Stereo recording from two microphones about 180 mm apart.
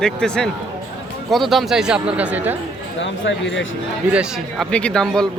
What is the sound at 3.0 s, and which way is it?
Speech, 90° left.